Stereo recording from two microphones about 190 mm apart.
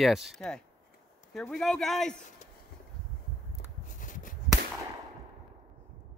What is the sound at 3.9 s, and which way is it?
Chop, 45° left (ahead or behind).